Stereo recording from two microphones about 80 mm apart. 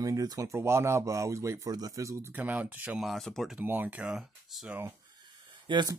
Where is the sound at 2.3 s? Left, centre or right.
Right.